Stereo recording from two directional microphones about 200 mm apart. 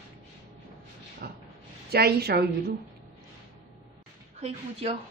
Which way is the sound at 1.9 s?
50° right (ahead or behind).